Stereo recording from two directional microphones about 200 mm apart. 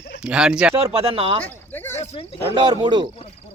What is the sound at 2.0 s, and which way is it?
Speech, 30° left (ahead or behind).